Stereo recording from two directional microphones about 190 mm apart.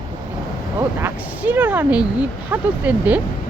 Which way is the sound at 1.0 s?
10° right (ahead or behind).